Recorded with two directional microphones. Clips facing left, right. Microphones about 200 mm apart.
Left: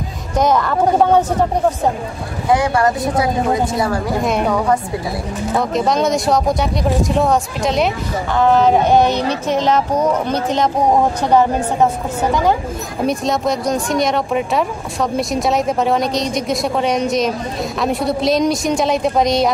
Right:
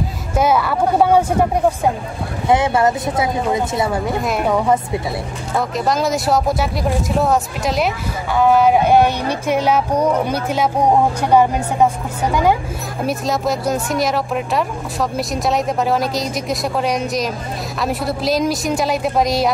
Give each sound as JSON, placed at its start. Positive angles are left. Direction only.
{"t": 0.4, "sound": "speech", "side_deg": -10}
{"t": 2.4, "sound": "speech", "side_deg": -20}
{"t": 4.2, "sound": "speech", "side_deg": 0}
{"t": 5.6, "sound": "speech", "side_deg": 0}
{"t": 13.0, "sound": "speech", "side_deg": -5}